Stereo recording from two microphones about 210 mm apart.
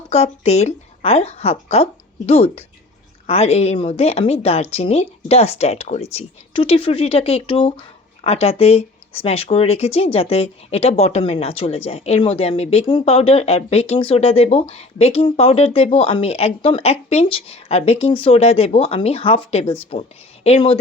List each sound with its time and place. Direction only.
0.1 s a woman's voice: 30° left (ahead or behind)